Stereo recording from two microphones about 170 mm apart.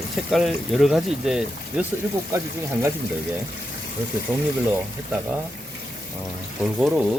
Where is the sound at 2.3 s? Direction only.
15° right (ahead or behind).